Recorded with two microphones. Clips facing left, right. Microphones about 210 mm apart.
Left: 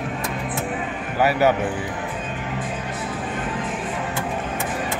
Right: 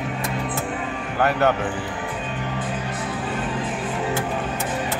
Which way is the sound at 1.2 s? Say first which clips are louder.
Left 2 dB; 5° left (ahead or behind).